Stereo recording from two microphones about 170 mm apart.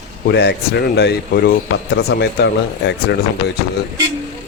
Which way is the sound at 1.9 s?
90° left.